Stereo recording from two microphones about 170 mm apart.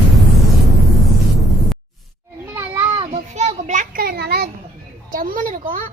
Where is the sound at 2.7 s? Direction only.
15° right (ahead or behind).